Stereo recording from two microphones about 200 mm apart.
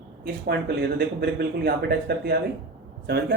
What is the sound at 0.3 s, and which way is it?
Speech, 50° right (ahead or behind).